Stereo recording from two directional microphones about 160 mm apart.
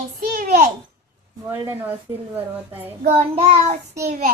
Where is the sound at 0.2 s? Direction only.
55° right (ahead or behind).